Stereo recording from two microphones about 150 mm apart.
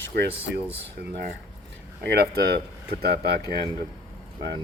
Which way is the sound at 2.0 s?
90° right.